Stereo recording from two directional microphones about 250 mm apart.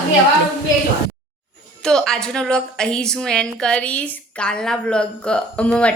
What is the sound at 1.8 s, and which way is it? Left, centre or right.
A woman's voice, centre.